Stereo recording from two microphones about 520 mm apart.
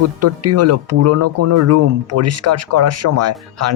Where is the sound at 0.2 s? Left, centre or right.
Right.